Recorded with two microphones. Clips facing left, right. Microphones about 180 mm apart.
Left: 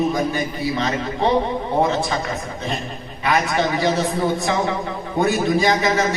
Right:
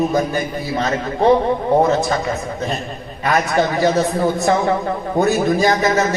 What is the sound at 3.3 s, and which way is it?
Speech, 45° right (ahead or behind).